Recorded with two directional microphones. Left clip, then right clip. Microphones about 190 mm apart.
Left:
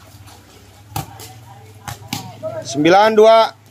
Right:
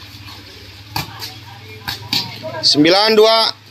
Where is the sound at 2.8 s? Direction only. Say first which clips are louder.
Left 2 dB; 5° left (ahead or behind).